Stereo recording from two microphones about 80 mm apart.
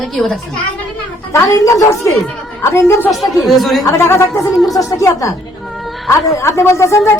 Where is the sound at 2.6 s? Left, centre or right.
Left.